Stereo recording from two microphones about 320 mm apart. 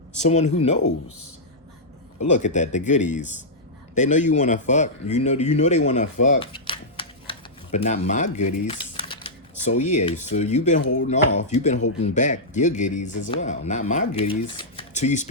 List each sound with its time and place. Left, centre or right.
0.2 s speech: left
0.8 s speech: left
2.3 s speech: left
10.8 s speech: left
11.4 s speech: left